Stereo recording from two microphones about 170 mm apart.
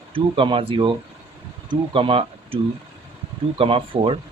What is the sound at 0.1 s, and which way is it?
Speech, 30° right (ahead or behind).